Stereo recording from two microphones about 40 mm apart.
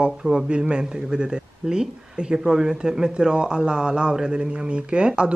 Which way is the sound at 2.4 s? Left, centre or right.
Centre.